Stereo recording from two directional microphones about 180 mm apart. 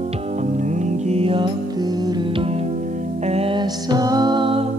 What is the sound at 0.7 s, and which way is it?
Music, 35° right (ahead or behind).